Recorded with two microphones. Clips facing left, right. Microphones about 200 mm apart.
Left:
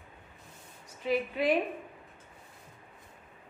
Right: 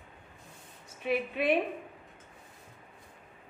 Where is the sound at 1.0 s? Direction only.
25° right (ahead or behind).